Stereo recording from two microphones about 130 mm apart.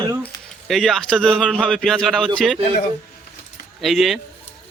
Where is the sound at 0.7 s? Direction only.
Centre (ahead or behind).